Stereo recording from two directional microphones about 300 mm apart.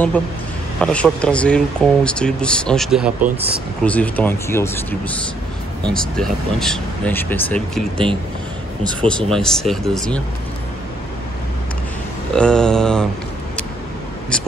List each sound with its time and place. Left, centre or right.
0.7 s speech: centre
3.2 s speech: right
3.8 s speech: centre
9.0 s speech: centre
12.4 s speech: centre
14.3 s whispering: centre